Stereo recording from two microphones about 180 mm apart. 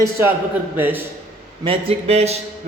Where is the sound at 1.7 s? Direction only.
35° right (ahead or behind).